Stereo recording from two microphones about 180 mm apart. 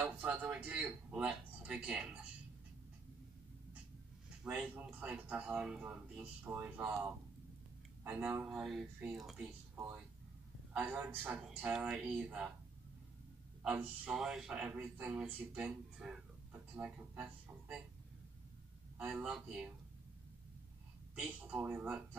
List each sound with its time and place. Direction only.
0.0 s speech: 10° right (ahead or behind)
4.4 s speech: 5° right (ahead or behind)
8.0 s speech: 10° right (ahead or behind)
10.7 s speech: 10° right (ahead or behind)
13.6 s speech: 10° right (ahead or behind)
18.9 s speech: 5° right (ahead or behind)
21.1 s speech: 10° right (ahead or behind)